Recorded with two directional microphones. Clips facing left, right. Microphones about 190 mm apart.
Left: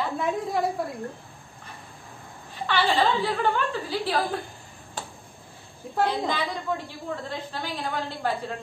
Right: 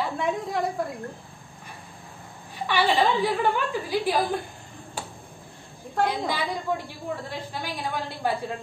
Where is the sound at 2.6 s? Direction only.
15° right (ahead or behind).